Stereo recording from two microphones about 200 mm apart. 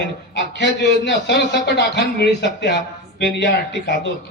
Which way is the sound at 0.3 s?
60° left (ahead or behind).